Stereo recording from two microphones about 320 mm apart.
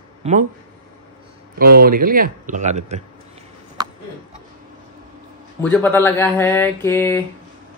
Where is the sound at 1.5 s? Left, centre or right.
Right.